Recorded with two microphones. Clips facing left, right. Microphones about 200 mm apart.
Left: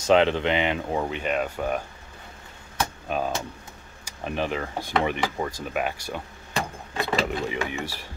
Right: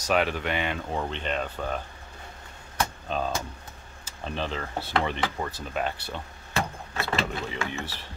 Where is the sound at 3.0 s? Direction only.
10° left (ahead or behind).